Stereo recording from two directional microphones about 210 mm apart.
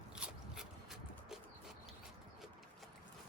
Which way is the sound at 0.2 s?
5° right (ahead or behind).